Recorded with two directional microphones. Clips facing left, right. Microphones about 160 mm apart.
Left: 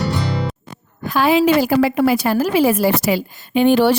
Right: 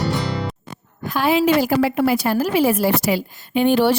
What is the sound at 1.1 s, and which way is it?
A woman's voice, 90° left.